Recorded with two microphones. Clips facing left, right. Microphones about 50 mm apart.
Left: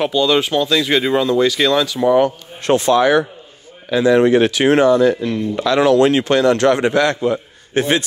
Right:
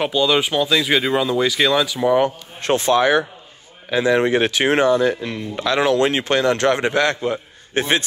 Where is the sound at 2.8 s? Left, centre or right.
Right.